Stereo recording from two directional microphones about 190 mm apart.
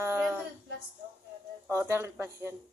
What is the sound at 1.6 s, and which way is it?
Speech, 15° right (ahead or behind).